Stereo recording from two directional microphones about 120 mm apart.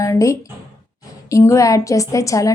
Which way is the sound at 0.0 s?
25° left (ahead or behind).